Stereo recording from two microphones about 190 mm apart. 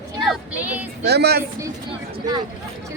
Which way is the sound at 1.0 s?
60° right (ahead or behind).